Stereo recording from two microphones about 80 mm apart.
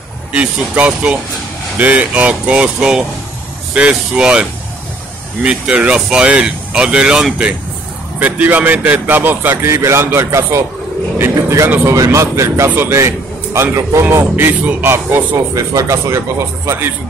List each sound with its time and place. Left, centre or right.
0.3 s speech: centre
9.7 s a man's voice: right